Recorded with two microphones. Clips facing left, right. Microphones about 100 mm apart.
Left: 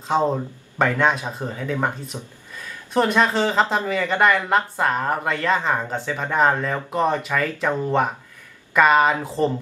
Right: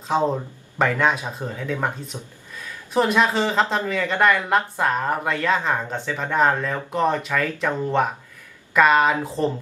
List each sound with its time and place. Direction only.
0.1 s speech: centre (ahead or behind)
2.1 s speech: 20° left (ahead or behind)
2.6 s speech: centre (ahead or behind)